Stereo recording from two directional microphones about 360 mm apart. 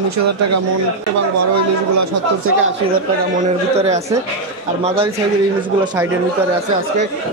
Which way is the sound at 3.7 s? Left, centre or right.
Centre.